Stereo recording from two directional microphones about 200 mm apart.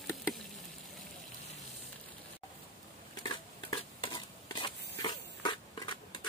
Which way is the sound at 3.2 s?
25° left (ahead or behind).